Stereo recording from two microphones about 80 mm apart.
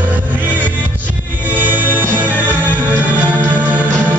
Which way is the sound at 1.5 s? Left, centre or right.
Right.